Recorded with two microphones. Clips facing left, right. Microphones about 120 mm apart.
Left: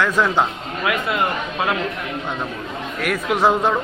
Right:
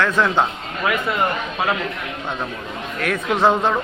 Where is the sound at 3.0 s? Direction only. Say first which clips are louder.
Even; 10° left (ahead or behind).